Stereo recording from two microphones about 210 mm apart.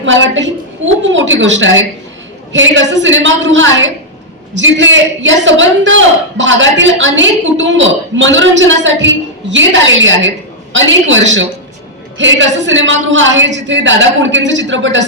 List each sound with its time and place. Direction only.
0.0 s a man's voice: 60° right (ahead or behind)